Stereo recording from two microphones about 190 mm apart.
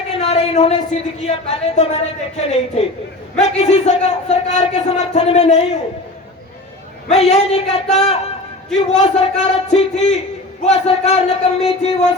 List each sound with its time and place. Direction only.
0.2 s speech: 30° left (ahead or behind)
7.1 s speech: 35° left (ahead or behind)